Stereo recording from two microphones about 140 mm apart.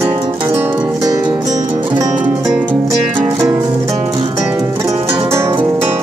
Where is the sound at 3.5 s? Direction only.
30° right (ahead or behind).